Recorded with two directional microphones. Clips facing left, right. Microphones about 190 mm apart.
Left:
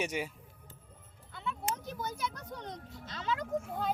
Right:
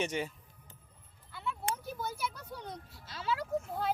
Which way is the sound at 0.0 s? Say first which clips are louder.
Right 1 dB; 10° left (ahead or behind).